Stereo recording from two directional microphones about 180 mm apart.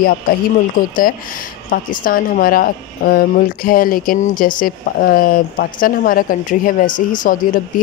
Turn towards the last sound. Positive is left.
turn(degrees=50)  # may be behind; listen again after turning